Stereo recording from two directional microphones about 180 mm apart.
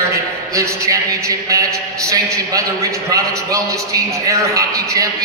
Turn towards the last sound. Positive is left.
turn(degrees=-20)  # may be behind; listen again after turning